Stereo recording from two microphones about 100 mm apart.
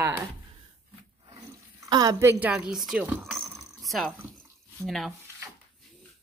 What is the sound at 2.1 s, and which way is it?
Speech, 25° right (ahead or behind).